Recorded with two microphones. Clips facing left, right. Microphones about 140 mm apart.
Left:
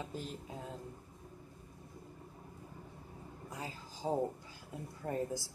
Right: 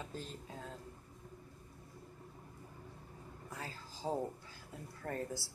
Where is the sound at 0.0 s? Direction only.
15° left (ahead or behind).